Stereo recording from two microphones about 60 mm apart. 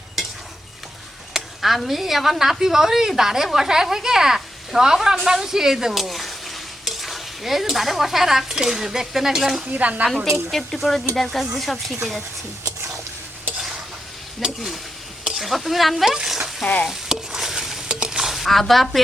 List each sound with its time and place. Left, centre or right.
1.3 s a woman's voice: centre
6.8 s stir: centre
9.7 s speech: right
10.3 s speech: centre
14.4 s speech: centre
16.1 s stir: centre